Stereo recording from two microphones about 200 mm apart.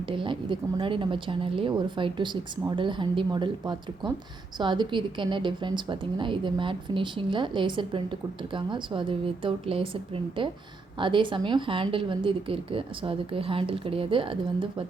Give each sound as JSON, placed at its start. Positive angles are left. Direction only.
{"t": 0.1, "sound": "a woman's voice", "side_deg": -25}